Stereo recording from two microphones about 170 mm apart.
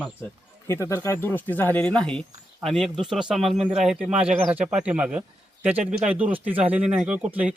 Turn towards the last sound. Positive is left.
turn(degrees=-10)  # may be behind; listen again after turning